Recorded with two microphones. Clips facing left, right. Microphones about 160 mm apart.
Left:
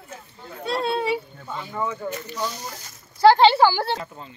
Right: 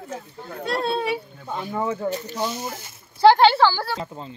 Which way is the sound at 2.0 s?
30° right (ahead or behind).